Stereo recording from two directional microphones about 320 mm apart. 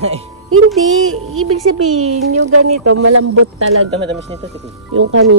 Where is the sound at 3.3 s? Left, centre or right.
Right.